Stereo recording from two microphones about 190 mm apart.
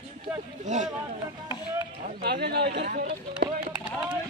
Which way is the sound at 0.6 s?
40° right (ahead or behind).